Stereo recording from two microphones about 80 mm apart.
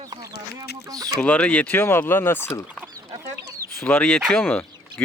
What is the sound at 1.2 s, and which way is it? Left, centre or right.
Speech, centre.